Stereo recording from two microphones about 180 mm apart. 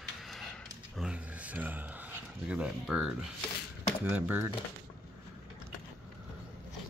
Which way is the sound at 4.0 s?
10° right (ahead or behind).